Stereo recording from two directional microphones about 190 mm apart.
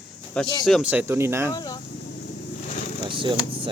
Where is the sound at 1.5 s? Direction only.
20° left (ahead or behind).